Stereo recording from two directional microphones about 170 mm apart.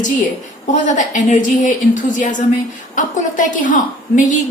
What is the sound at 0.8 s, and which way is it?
A woman's voice, 45° left (ahead or behind).